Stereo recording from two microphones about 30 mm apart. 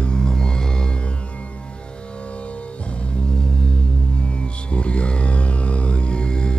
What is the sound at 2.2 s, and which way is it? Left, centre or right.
Music, left.